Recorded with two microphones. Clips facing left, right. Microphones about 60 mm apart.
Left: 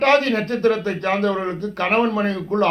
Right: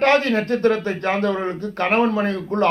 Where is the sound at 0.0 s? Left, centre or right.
Right.